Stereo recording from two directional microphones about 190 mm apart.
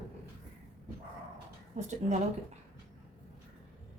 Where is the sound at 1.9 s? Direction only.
40° right (ahead or behind).